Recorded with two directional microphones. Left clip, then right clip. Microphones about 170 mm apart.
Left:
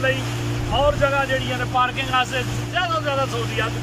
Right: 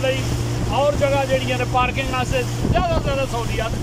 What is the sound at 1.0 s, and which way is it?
Speech, 20° right (ahead or behind).